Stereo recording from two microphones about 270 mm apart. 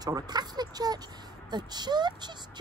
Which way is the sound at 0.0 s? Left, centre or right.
Centre.